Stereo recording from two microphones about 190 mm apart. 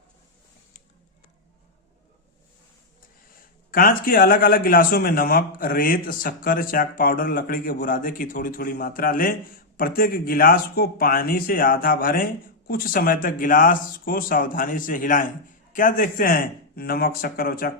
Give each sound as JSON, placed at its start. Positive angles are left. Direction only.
{"t": 3.7, "sound": "speech", "side_deg": 50}